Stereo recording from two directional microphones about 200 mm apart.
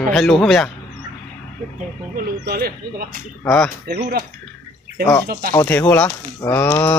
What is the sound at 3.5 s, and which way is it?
Speech, centre (ahead or behind).